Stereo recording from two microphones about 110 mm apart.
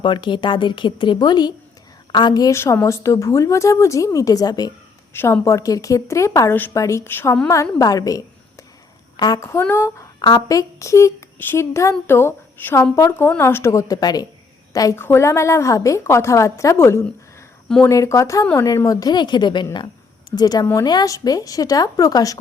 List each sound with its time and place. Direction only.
0.0 s a woman's voice: 45° left (ahead or behind)
2.6 s a woman's voice: 25° left (ahead or behind)
5.1 s a woman's voice: 25° left (ahead or behind)
7.5 s a woman's voice: 30° left (ahead or behind)
9.5 s a woman's voice: 20° left (ahead or behind)
10.2 s a woman's voice: 40° left (ahead or behind)
14.9 s a woman's voice: 20° left (ahead or behind)